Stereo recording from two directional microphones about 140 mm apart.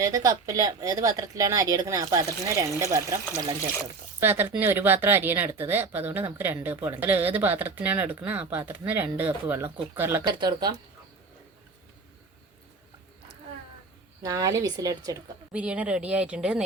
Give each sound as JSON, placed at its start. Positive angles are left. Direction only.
{"t": 0.0, "sound": "speech", "side_deg": -25}
{"t": 4.2, "sound": "speech", "side_deg": -15}
{"t": 10.3, "sound": "speech", "side_deg": -30}
{"t": 14.2, "sound": "speech", "side_deg": -25}
{"t": 15.5, "sound": "speech", "side_deg": -10}